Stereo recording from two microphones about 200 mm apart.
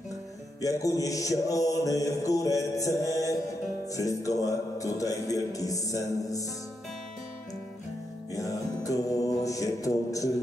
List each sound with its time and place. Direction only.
0.6 s music: 15° left (ahead or behind)
8.3 s music: 15° left (ahead or behind)